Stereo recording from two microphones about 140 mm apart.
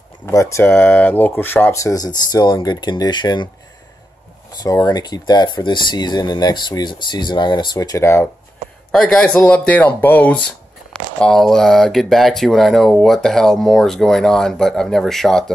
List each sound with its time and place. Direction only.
0.3 s speech: 20° left (ahead or behind)
4.5 s speech: 25° left (ahead or behind)
8.9 s speech: 5° left (ahead or behind)